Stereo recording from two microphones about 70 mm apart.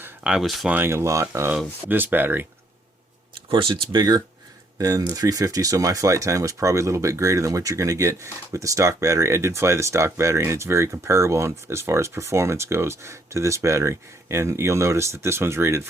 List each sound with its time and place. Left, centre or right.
0.3 s speech: centre
0.9 s speech: right
3.9 s speech: right